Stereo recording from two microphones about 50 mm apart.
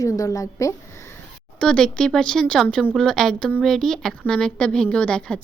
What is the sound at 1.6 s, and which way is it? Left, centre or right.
Speech, centre.